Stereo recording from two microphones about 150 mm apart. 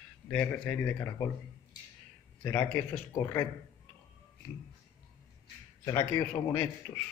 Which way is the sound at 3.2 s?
20° left (ahead or behind).